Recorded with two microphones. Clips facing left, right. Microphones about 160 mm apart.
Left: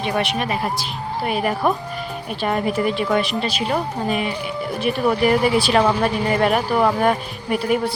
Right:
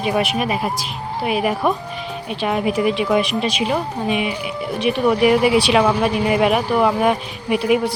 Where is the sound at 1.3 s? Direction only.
5° right (ahead or behind).